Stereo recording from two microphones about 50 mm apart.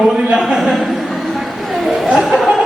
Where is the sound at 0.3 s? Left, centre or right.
Centre.